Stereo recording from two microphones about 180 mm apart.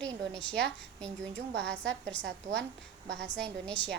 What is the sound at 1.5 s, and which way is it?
Speech, 75° right (ahead or behind).